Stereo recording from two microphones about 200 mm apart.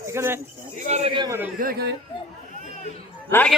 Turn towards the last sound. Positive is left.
turn(degrees=10)  # may be behind; listen again after turning